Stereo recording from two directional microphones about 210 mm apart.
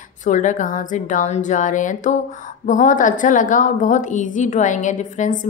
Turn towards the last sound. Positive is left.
turn(degrees=35)  # may be behind; listen again after turning